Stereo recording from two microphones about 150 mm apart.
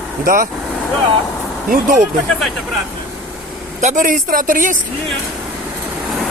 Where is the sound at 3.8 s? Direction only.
55° right (ahead or behind).